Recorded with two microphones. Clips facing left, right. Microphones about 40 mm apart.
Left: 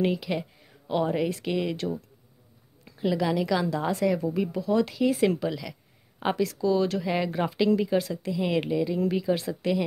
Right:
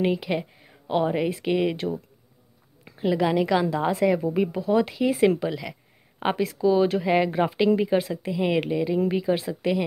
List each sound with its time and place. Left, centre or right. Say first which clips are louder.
0.0 s speech: right 2 dB; centre